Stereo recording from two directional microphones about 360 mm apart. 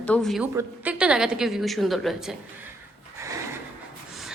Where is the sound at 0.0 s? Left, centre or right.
Centre.